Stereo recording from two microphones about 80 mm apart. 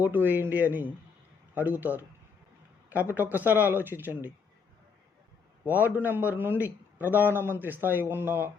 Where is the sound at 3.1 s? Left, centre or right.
Right.